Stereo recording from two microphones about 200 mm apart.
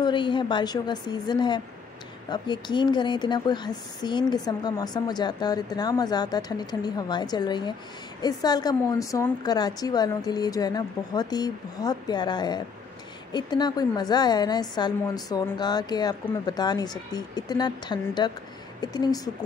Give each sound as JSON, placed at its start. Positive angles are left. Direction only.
{"t": 0.0, "sound": "speech", "side_deg": 25}